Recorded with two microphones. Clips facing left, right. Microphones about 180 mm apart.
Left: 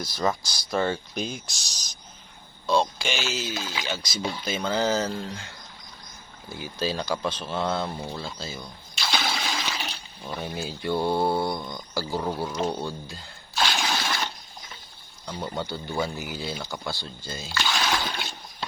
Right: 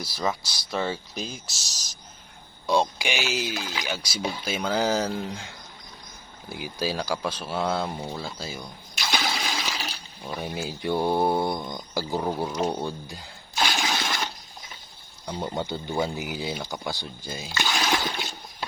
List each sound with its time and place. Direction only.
0.0 s speech: 5° right (ahead or behind)
2.6 s speech: 15° right (ahead or behind)
12.6 s a sound: 15° right (ahead or behind)
15.3 s speech: 20° right (ahead or behind)